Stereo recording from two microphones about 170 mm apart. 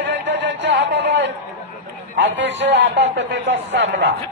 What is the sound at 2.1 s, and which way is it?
Speech, 90° right.